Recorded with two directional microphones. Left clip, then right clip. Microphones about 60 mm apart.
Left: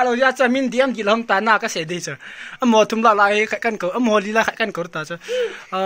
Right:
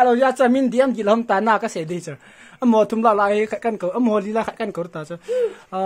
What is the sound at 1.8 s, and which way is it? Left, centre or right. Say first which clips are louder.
Speech: left 3 dB; right.